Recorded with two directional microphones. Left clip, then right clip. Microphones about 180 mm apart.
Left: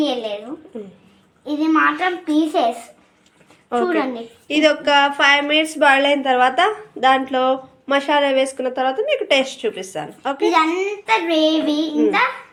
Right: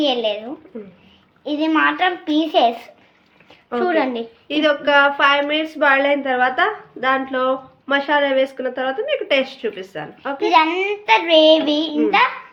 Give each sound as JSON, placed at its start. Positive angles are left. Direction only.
{"t": 0.0, "sound": "a woman's voice", "side_deg": -15}
{"t": 1.5, "sound": "child singing", "side_deg": -20}
{"t": 3.8, "sound": "child singing", "side_deg": -20}
{"t": 4.4, "sound": "a woman's voice", "side_deg": 0}
{"t": 10.4, "sound": "child singing", "side_deg": -15}